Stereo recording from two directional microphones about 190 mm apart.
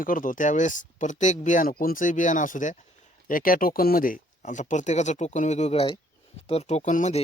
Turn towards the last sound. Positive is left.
turn(degrees=40)  # may be behind; listen again after turning